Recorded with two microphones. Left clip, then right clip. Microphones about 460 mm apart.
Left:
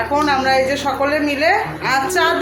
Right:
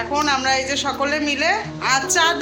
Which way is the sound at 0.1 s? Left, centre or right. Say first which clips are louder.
Left 3 dB; right.